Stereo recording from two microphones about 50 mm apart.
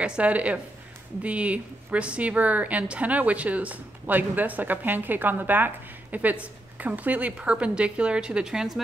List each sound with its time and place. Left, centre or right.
0.0 s a woman's voice: right; by 8.8 s centre